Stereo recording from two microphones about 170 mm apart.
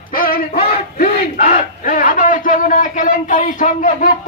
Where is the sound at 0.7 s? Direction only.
60° left (ahead or behind).